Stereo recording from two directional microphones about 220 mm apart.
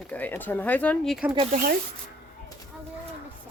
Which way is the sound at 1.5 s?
40° right (ahead or behind).